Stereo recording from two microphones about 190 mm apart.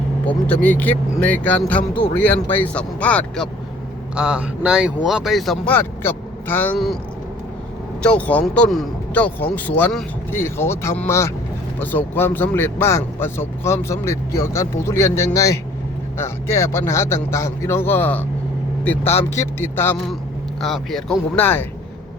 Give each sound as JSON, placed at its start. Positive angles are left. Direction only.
{"t": 0.3, "sound": "speech", "side_deg": 10}
{"t": 4.1, "sound": "speech", "side_deg": -5}
{"t": 8.0, "sound": "speech", "side_deg": 5}
{"t": 19.5, "sound": "speech", "side_deg": 10}